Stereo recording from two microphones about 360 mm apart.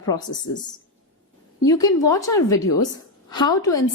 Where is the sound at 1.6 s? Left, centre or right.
Centre.